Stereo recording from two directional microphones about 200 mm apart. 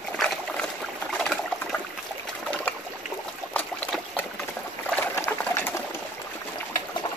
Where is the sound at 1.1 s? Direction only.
5° left (ahead or behind).